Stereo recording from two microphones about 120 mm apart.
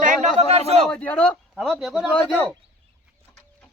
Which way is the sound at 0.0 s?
70° right (ahead or behind).